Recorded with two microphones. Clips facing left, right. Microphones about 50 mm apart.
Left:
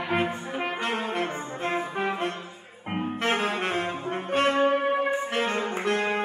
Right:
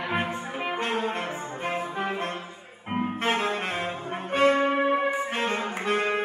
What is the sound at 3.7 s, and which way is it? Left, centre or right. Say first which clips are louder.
Brass instrument: left 2 dB; centre.